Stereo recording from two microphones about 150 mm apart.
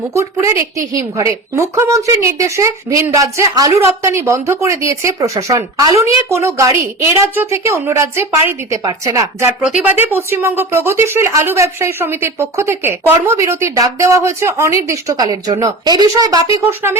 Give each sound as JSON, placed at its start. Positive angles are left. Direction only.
{"t": 0.1, "sound": "a woman's voice", "side_deg": -20}
{"t": 9.6, "sound": "speech", "side_deg": -10}